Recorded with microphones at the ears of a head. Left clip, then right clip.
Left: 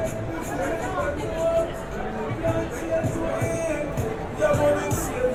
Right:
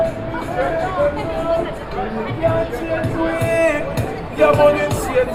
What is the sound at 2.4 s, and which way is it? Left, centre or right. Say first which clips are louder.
Music: right 9 dB; right.